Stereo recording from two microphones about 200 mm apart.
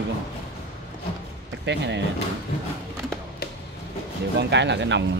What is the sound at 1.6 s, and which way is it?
Speech, 60° right (ahead or behind).